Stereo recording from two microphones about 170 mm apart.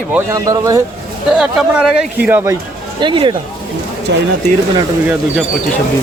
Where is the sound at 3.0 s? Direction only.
30° right (ahead or behind).